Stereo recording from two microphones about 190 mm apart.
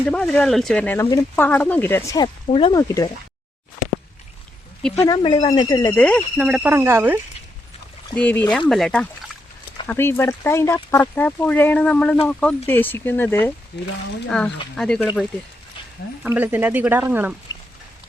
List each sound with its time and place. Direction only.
0.0 s speech: 5° left (ahead or behind); by 2.8 s 30° left (ahead or behind)
4.8 s speech: 5° left (ahead or behind)
5.0 s speech: 25° left (ahead or behind)
5.9 s speech: 5° left (ahead or behind); by 7.2 s 10° right (ahead or behind)
8.1 s speech: 10° left (ahead or behind)
16.2 s speech: 10° right (ahead or behind)